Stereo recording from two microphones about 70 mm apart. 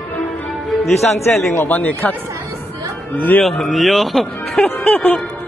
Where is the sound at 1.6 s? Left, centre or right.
Left.